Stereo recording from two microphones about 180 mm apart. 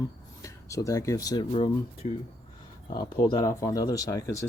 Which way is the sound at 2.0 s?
35° left (ahead or behind).